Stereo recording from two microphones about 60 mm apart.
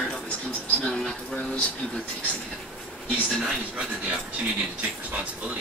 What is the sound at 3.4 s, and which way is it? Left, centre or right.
Speech, centre.